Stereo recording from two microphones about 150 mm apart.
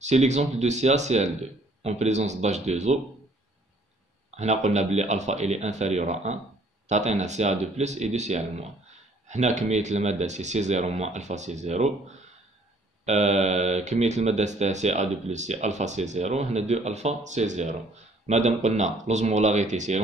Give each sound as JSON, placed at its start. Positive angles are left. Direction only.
{"t": 0.0, "sound": "speech", "side_deg": -50}
{"t": 4.4, "sound": "speech", "side_deg": -50}